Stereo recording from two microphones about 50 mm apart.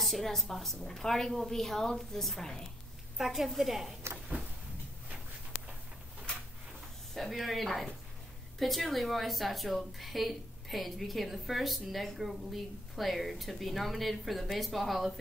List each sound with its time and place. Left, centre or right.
0.0 s a woman's voice: centre
3.2 s a woman's voice: centre
7.2 s a woman's voice: centre